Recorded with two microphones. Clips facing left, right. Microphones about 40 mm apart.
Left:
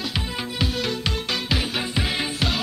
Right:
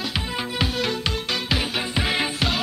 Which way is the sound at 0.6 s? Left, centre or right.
Centre.